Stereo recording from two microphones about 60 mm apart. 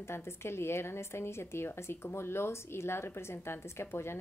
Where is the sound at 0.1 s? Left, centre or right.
Left.